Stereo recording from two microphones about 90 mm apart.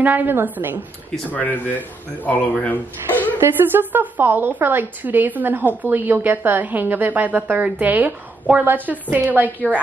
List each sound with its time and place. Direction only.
0.0 s a woman's voice: 20° right (ahead or behind)
1.3 s speech: 20° left (ahead or behind)
3.3 s a woman's voice: 25° right (ahead or behind)